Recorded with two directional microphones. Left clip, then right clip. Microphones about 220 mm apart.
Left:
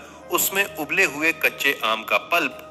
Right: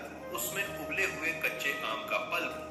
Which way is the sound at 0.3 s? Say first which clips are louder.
Left 13 dB; 55° left (ahead or behind).